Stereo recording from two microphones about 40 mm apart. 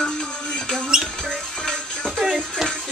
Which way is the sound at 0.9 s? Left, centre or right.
Centre.